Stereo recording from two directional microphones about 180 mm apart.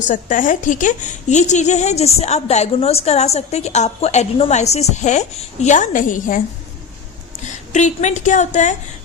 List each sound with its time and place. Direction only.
0.1 s a woman's voice: 45° left (ahead or behind)
7.4 s a woman's voice: 40° left (ahead or behind)